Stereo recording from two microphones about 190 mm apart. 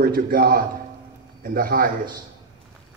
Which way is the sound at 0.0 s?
50° right (ahead or behind).